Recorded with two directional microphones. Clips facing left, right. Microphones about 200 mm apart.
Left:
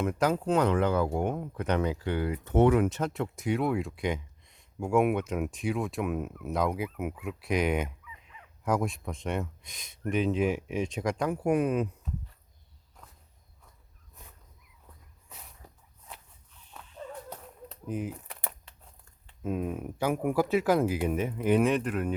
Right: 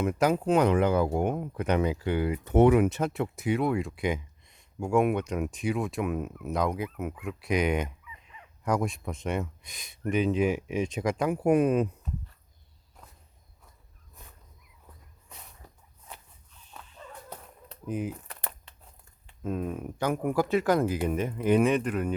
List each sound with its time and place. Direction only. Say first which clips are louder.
0.0 s speech: right 2 dB; 10° right (ahead or behind)
11.4 s speech: right 4 dB; 25° right (ahead or behind)
15.6 s walk: even; 10° left (ahead or behind)
17.0 s a sound: left 7 dB; 30° left (ahead or behind)
17.7 s a sound: right 2 dB; centre (ahead or behind)
18.3 s crumpling: even; 10° left (ahead or behind)
19.4 s speech: even; 10° left (ahead or behind)